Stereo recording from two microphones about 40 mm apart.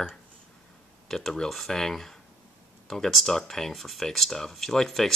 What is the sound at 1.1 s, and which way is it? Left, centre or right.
Speech, centre.